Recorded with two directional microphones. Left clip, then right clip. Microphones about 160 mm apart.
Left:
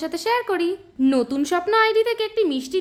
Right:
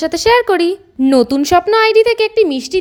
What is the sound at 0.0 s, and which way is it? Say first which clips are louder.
A woman's voice: right 11 dB; 45° right (ahead or behind).